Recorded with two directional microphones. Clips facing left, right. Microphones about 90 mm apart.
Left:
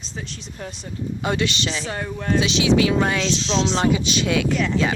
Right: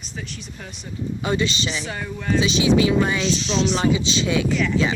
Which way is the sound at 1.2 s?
65° left (ahead or behind).